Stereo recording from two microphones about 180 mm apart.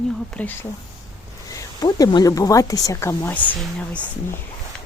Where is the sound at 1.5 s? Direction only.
20° left (ahead or behind).